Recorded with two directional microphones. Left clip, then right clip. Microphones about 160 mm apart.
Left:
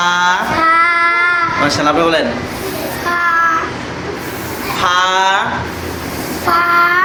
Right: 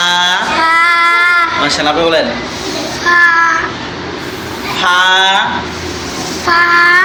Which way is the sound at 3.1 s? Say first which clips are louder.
Right 8 dB; 20° left (ahead or behind).